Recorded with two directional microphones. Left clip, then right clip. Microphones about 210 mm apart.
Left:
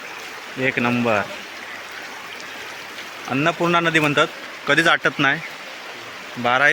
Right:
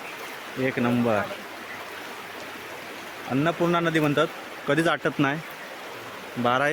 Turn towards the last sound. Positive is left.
turn(degrees=-10)  # may be behind; listen again after turning